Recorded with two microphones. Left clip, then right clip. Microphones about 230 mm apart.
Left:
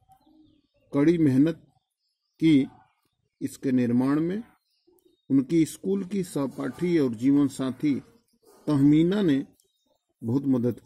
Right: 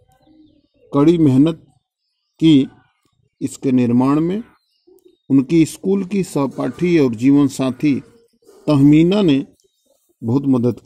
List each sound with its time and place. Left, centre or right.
0.8 s speech: centre